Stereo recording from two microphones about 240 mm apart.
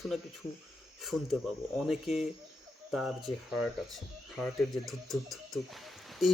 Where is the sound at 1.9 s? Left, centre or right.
Centre.